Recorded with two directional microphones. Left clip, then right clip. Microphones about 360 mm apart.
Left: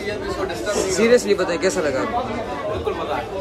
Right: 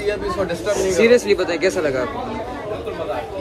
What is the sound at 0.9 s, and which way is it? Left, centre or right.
Speech, centre.